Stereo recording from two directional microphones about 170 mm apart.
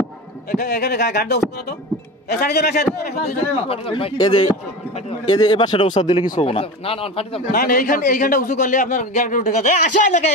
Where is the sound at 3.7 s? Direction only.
35° left (ahead or behind).